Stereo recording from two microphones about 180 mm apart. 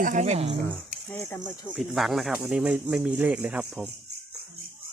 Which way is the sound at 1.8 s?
Centre (ahead or behind).